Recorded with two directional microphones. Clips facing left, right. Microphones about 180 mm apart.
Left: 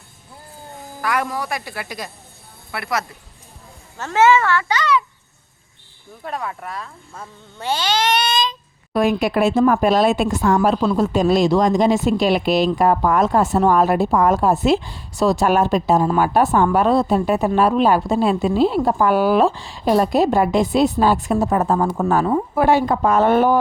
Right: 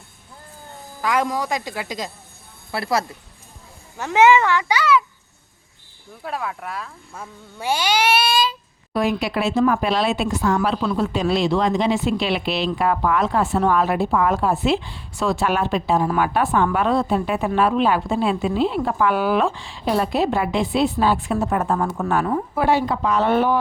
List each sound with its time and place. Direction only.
1.0 s speech: 15° right (ahead or behind)
2.7 s speech: 30° right (ahead or behind)
3.9 s speech: 15° right (ahead or behind)
6.2 s speech: centre (ahead or behind)
8.9 s speech: 50° left (ahead or behind); by 22.1 s 30° left (ahead or behind)
22.5 s speech: 50° left (ahead or behind)